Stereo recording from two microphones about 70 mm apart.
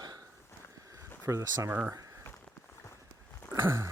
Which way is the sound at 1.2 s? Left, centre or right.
Right.